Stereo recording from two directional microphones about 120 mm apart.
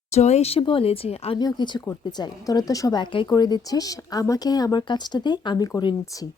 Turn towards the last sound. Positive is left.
turn(degrees=35)  # may be behind; listen again after turning